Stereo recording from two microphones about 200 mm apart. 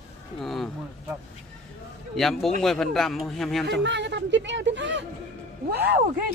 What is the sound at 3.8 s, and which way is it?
Speech, 60° right (ahead or behind).